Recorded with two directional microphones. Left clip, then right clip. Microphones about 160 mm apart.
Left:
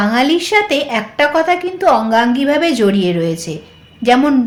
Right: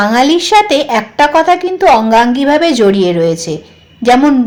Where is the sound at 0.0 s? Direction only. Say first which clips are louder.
Right 4 dB; 35° right (ahead or behind).